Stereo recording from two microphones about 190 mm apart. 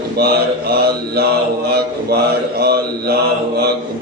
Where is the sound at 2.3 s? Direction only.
55° right (ahead or behind).